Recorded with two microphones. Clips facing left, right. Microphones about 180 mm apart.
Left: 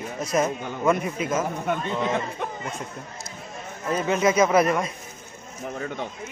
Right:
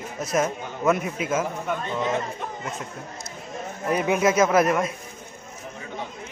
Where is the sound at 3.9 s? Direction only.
10° right (ahead or behind).